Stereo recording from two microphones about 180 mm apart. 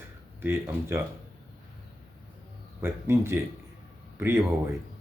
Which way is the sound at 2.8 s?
15° right (ahead or behind).